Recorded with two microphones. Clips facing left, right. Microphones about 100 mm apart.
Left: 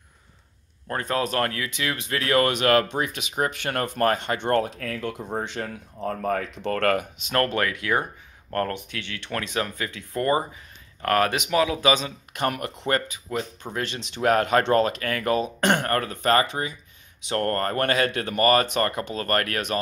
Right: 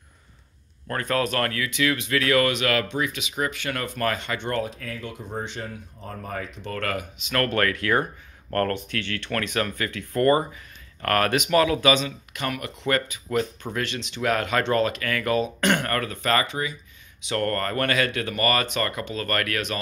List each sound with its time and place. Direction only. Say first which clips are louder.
0.8 s speech: right 1 dB; 20° left (ahead or behind); by 4.4 s 45° left (ahead or behind)
4.4 s speech: left 5 dB; 55° left (ahead or behind)
7.4 s speech: right 2 dB; 15° left (ahead or behind)
12.0 s speech: left 3 dB; 40° left (ahead or behind)
13.3 s speech: right 4 dB; 20° left (ahead or behind)
13.7 s speech: even; 40° left (ahead or behind)